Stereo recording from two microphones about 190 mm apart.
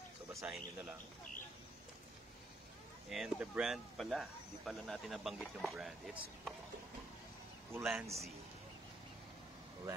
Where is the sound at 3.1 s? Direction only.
Centre (ahead or behind).